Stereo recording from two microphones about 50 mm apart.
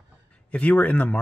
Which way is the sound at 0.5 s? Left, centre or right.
Left.